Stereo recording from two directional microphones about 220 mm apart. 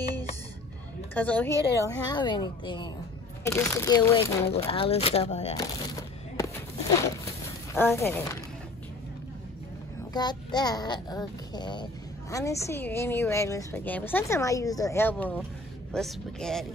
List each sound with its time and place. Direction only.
1.1 s a child's voice: 5° left (ahead or behind)
2.0 s a child's voice: 20° left (ahead or behind)
5.6 s a sound: 15° left (ahead or behind)
7.7 s a child's voice: 10° left (ahead or behind)
10.1 s a child's voice: 20° left (ahead or behind); by 16.6 s centre (ahead or behind)